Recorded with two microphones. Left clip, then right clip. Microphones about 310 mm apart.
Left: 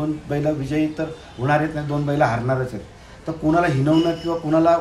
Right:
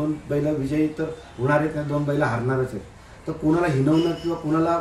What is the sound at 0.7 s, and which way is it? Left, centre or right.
A man's voice, centre.